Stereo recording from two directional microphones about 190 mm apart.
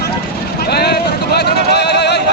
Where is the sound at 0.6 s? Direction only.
55° left (ahead or behind).